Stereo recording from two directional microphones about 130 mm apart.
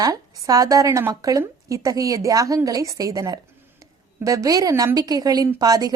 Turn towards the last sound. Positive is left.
turn(degrees=-30)  # may be behind; listen again after turning